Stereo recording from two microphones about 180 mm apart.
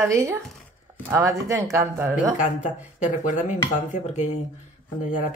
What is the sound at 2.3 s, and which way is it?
Speech, 40° left (ahead or behind).